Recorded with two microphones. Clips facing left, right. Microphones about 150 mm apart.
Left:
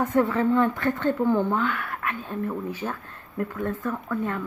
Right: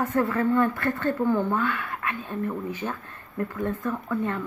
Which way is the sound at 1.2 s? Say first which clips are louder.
Left 1 dB; 15° left (ahead or behind).